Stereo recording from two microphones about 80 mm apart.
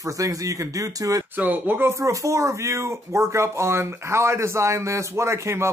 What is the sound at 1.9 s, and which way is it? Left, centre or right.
Speech, right.